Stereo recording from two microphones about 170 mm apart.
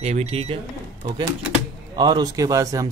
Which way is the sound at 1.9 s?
25° right (ahead or behind).